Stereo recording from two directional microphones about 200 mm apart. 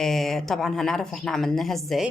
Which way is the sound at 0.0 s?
Centre (ahead or behind).